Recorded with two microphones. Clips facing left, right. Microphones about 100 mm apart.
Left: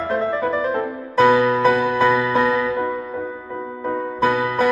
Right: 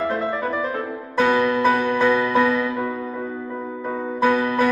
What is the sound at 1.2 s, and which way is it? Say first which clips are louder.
Music: left 3 dB; 10° left (ahead or behind).